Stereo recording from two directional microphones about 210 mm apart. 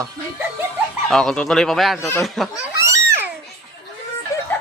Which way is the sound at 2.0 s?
10° left (ahead or behind).